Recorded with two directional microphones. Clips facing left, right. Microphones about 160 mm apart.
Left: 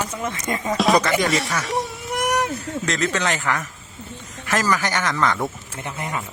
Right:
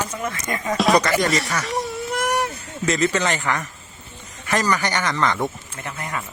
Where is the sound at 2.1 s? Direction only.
15° left (ahead or behind).